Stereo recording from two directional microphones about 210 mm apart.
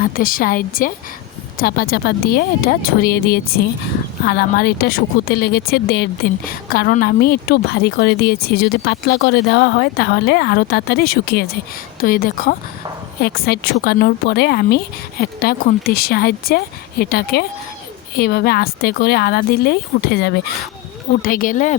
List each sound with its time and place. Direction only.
0.0 s speech: 45° left (ahead or behind)